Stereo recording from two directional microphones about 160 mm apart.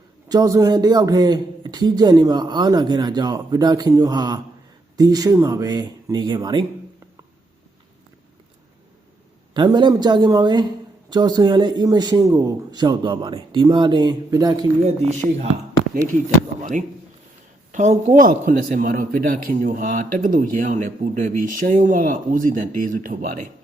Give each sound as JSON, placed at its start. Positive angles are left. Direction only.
{"t": 0.3, "sound": "speech", "side_deg": -20}
{"t": 9.6, "sound": "speech", "side_deg": -30}
{"t": 14.8, "sound": "speech", "side_deg": -45}
{"t": 17.7, "sound": "a man's voice", "side_deg": -50}